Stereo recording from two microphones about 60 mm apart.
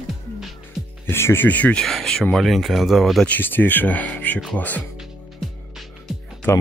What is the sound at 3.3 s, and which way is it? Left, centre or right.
Speech, left.